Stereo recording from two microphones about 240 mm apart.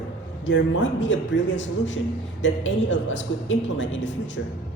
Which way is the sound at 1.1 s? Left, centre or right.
Left.